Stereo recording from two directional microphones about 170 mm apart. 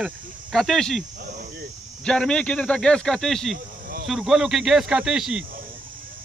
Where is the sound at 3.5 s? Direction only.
55° right (ahead or behind).